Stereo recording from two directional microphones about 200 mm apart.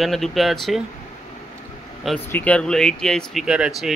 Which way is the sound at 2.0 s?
5° left (ahead or behind).